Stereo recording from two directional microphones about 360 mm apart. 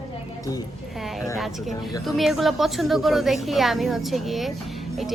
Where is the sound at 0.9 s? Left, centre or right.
Centre.